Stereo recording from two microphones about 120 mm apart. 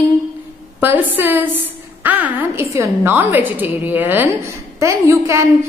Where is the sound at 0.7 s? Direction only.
15° right (ahead or behind).